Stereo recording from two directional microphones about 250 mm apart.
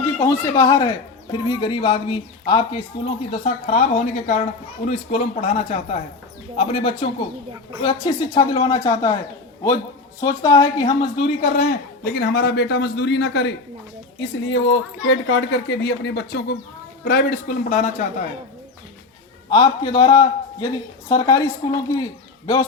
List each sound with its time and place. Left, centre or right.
0.0 s a woman's voice: centre
10.2 s a woman's voice: centre
11.5 s a man's voice: left
19.5 s a woman's voice: centre